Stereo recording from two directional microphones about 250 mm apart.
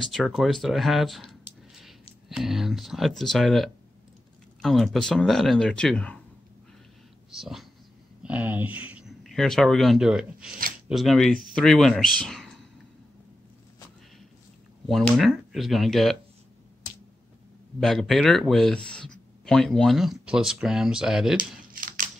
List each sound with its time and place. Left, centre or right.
0.0 s speech: centre
7.2 s speech: centre
14.9 s speech: centre
17.7 s speech: centre
21.4 s a sound: right